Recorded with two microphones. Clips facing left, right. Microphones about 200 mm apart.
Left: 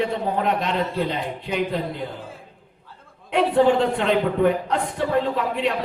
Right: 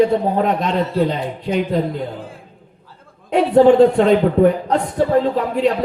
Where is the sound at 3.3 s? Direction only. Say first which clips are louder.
Right 6 dB; 45° right (ahead or behind).